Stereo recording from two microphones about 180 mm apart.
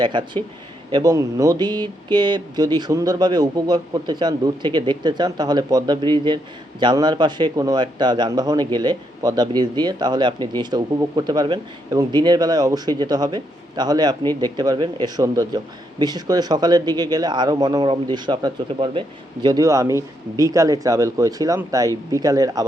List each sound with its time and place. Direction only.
0.0 s speech: 25° right (ahead or behind)